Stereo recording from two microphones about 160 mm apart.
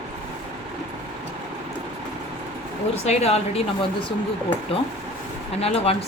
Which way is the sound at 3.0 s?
40° left (ahead or behind).